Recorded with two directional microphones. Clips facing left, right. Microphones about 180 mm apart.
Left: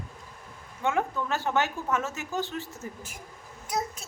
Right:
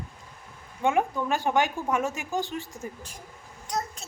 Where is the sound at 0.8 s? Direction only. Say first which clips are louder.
Right 3 dB; 15° right (ahead or behind).